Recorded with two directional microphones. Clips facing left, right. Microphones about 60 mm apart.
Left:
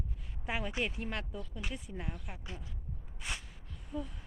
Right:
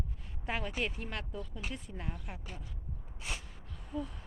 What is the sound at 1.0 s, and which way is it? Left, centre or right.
Speech, centre.